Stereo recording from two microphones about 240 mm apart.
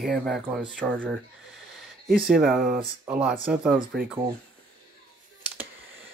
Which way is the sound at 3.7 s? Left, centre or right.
Right.